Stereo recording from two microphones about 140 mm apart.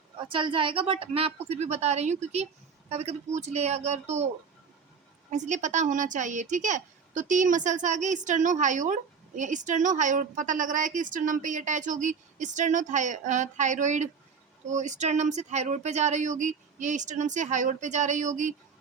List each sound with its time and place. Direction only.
0.2 s speech: 35° right (ahead or behind); by 4.3 s 50° right (ahead or behind)
5.3 s speech: 60° right (ahead or behind)